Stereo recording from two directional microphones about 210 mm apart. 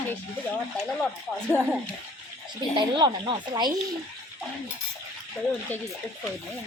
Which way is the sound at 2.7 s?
25° right (ahead or behind).